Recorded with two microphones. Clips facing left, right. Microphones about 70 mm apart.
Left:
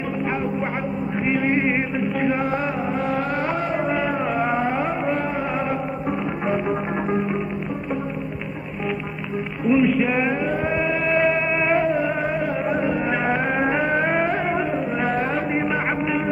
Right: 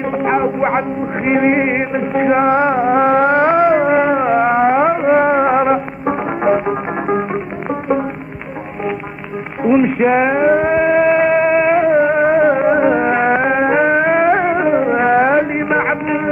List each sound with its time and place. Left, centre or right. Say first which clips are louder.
0.2 s a man's voice: right 10 dB; right
1.7 s music: right 6 dB; right
9.6 s music: right 5 dB; right
10.0 s a sound: right 10 dB; right
11.2 s music: right 8 dB; right
11.5 s music: right 8 dB; centre
11.9 s music: right 10 dB; right